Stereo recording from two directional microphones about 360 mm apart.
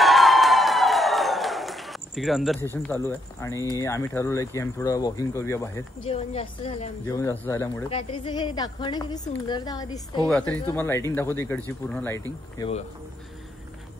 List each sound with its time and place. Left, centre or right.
0.0 s a sound: centre
3.1 s speech: centre
12.5 s speech: centre